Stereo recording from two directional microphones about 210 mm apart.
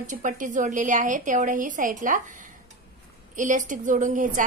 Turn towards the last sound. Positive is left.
turn(degrees=-40)  # may be behind; listen again after turning